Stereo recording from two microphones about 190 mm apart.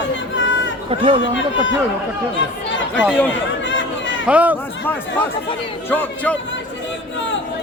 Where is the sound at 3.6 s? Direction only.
75° left (ahead or behind).